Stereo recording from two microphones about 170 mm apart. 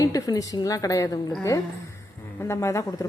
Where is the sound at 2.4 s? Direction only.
15° left (ahead or behind).